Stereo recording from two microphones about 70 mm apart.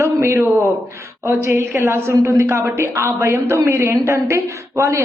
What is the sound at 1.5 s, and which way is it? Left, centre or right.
A woman's voice, right.